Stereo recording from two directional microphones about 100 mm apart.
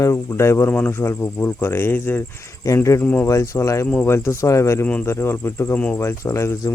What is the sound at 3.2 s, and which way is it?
Speech, 30° left (ahead or behind).